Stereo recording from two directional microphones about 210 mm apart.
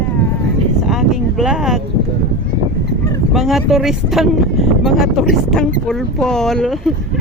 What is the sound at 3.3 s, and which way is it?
Speech, centre (ahead or behind).